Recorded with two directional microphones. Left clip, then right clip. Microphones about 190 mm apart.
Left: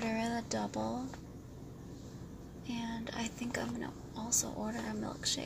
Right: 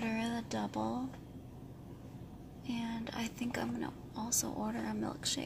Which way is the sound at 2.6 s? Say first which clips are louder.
Even; 15° right (ahead or behind).